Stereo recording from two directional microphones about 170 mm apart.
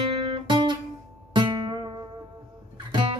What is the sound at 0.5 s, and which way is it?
Guitar, 30° right (ahead or behind).